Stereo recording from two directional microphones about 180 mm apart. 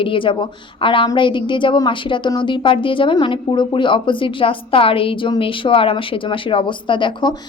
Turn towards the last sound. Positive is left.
turn(degrees=25)  # may be behind; listen again after turning